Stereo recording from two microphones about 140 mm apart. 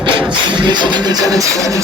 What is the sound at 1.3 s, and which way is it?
Speech, 25° right (ahead or behind).